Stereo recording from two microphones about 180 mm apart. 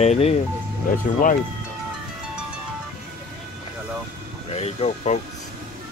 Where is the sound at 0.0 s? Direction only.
35° left (ahead or behind).